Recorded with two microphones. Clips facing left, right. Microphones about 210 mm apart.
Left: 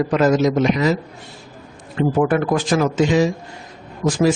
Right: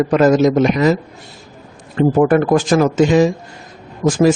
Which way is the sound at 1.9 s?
45° right (ahead or behind).